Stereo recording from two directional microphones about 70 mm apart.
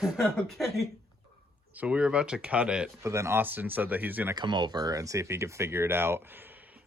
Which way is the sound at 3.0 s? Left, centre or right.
Right.